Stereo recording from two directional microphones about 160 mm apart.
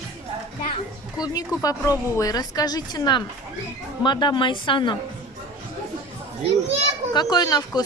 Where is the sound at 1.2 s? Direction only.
25° left (ahead or behind).